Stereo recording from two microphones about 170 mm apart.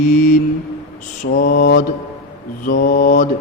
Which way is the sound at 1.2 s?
60° left (ahead or behind).